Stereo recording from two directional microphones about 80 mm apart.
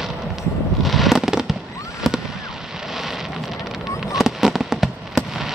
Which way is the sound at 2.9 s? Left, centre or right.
Centre.